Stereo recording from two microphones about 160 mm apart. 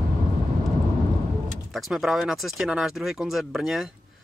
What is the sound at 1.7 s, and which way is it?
Speech, centre (ahead or behind).